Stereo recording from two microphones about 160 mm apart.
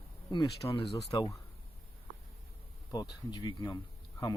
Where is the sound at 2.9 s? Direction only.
25° left (ahead or behind).